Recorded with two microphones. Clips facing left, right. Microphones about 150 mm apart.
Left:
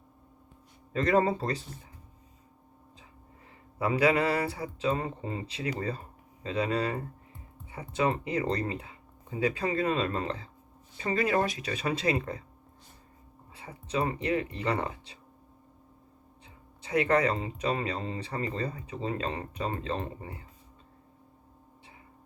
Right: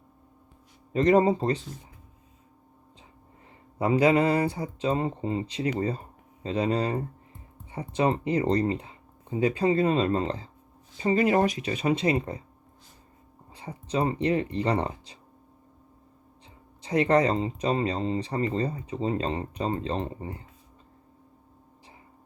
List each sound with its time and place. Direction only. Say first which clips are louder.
0.9 s speech: right 5 dB; 20° right (ahead or behind)
3.8 s speech: right 4 dB; 25° right (ahead or behind)
13.5 s speech: right 3 dB; 30° right (ahead or behind)
16.8 s speech: right 3 dB; 30° right (ahead or behind)